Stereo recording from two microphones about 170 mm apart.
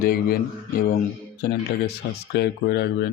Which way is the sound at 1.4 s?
70° left (ahead or behind).